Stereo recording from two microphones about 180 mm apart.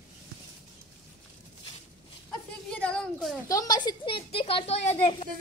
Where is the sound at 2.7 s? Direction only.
5° left (ahead or behind).